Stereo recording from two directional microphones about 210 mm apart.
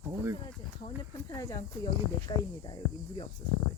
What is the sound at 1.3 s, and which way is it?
Speech, 15° left (ahead or behind).